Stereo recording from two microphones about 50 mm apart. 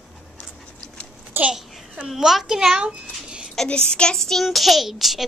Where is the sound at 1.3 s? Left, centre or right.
Right.